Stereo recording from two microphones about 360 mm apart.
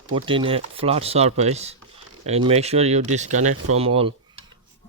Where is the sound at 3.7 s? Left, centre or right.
Centre.